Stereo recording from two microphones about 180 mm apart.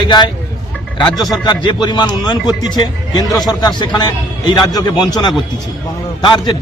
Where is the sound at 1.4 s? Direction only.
25° left (ahead or behind).